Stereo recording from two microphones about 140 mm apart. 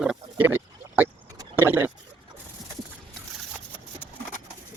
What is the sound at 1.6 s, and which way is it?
Boat, 15° right (ahead or behind).